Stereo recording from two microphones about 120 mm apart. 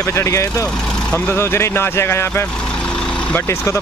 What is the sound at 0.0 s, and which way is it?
Speech, 25° left (ahead or behind).